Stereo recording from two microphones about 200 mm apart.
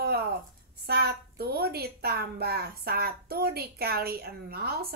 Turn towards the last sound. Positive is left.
turn(degrees=-50)  # may be behind; listen again after turning